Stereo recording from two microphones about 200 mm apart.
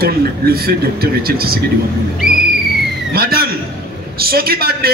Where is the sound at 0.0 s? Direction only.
50° right (ahead or behind).